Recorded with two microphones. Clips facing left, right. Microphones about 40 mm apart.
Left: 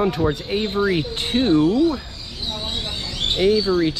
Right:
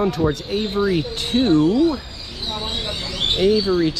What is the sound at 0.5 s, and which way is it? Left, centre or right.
Speech, left.